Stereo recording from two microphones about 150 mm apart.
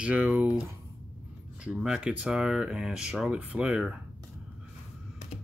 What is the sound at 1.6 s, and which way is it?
Speech, 5° right (ahead or behind).